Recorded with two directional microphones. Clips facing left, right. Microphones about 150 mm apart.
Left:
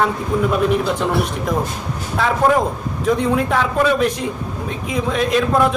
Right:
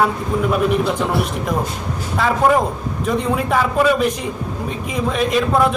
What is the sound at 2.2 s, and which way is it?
Speech, centre (ahead or behind).